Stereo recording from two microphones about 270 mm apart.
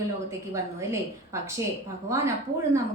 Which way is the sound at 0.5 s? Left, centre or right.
Centre.